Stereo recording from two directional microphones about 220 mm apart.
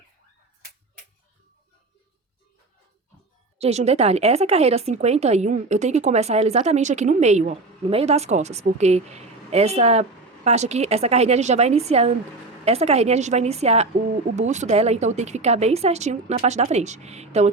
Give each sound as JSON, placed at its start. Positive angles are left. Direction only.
{"t": 3.6, "sound": "speech", "side_deg": -30}